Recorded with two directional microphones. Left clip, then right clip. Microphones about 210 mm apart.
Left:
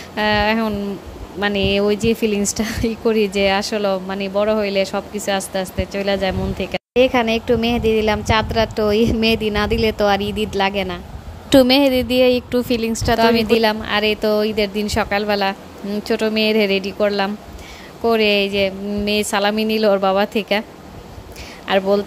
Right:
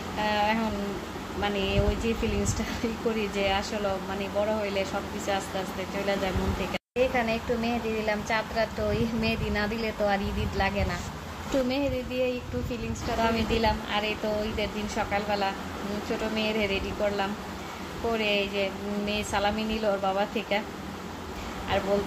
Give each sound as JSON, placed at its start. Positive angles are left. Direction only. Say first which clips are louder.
{"t": 0.2, "sound": "speech", "louder": "left 9 dB", "side_deg": 50}
{"t": 21.7, "sound": "speech", "louder": "left 11 dB", "side_deg": 50}